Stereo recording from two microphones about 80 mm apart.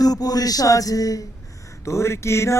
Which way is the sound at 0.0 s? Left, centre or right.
Left.